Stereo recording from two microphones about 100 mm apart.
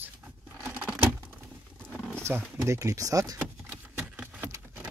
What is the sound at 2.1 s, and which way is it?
Speech, 25° right (ahead or behind).